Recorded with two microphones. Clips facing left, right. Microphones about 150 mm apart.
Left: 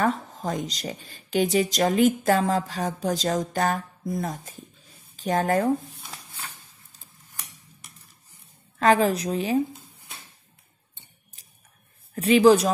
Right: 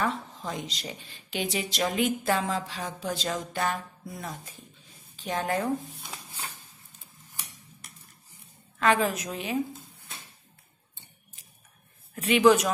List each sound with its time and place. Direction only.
0.0 s speech: 45° left (ahead or behind)
8.7 s a woman's voice: 35° left (ahead or behind)
12.2 s a woman's voice: 35° left (ahead or behind)